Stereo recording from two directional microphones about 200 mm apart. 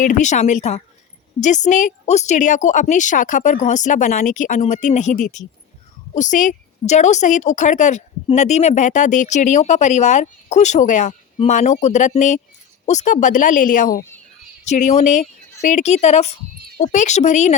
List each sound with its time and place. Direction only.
0.0 s a woman's voice: 40° left (ahead or behind)